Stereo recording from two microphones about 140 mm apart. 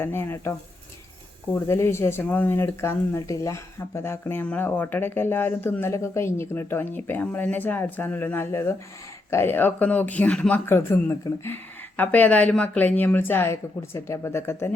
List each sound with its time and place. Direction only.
0.0 s speech: 15° left (ahead or behind)
1.5 s speech: 20° left (ahead or behind)
10.7 s speech: 15° left (ahead or behind)